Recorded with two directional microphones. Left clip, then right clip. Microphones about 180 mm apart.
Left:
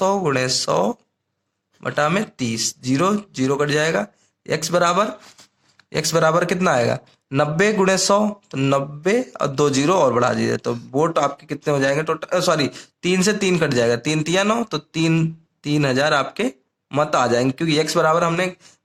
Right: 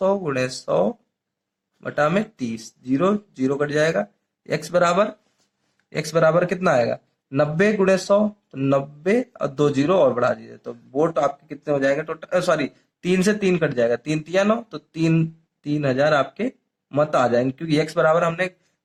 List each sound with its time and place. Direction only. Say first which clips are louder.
0.0 s a man's voice: left 2 dB; 35° left (ahead or behind)